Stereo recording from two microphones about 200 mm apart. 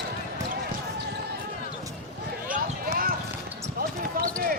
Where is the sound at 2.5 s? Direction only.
45° right (ahead or behind).